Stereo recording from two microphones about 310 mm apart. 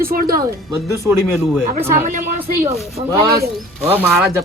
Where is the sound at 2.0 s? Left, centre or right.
Right.